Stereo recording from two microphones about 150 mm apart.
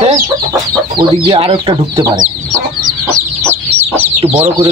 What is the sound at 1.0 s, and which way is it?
Speech, 35° right (ahead or behind).